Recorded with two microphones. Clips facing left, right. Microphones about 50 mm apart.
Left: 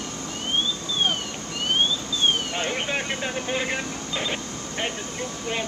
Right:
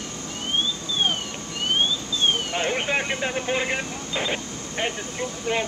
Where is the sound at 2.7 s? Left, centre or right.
Centre.